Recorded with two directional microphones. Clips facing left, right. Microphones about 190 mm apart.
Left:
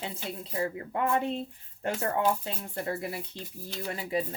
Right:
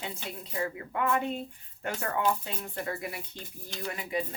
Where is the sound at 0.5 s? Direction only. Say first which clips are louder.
Left 1 dB; 30° left (ahead or behind).